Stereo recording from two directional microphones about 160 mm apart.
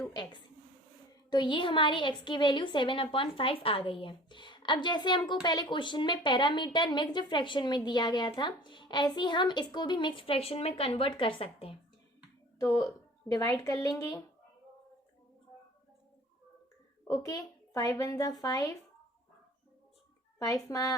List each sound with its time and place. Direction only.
0.1 s a woman's voice: 30° left (ahead or behind)
12.5 s a woman's voice: 20° left (ahead or behind)
17.2 s a woman's voice: 20° left (ahead or behind)
20.4 s a woman's voice: 20° left (ahead or behind)